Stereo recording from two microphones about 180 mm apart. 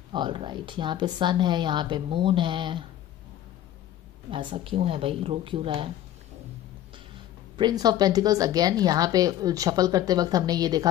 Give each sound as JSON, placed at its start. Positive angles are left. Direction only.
{"t": 0.1, "sound": "a woman's voice", "side_deg": -25}
{"t": 4.3, "sound": "a woman's voice", "side_deg": -30}
{"t": 7.5, "sound": "a woman's voice", "side_deg": -25}